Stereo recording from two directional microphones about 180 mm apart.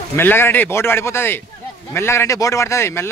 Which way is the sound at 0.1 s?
10° left (ahead or behind).